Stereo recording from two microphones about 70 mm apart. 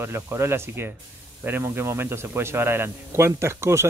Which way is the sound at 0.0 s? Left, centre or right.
Right.